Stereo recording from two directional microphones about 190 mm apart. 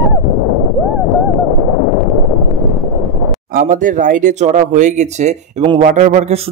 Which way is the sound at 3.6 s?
45° right (ahead or behind).